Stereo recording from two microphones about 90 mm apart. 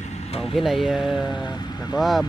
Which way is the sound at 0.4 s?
Centre (ahead or behind).